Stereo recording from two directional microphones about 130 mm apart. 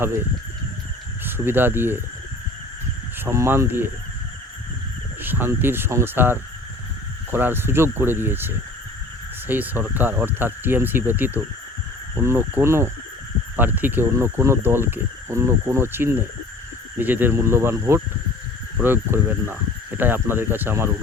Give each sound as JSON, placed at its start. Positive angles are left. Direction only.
{"t": 1.2, "sound": "speech", "side_deg": -15}
{"t": 3.2, "sound": "speech", "side_deg": -20}
{"t": 5.2, "sound": "speech", "side_deg": -15}